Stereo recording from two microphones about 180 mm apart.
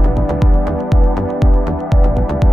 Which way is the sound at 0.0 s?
Centre (ahead or behind).